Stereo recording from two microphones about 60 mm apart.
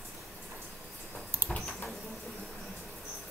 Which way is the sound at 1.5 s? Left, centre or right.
Left.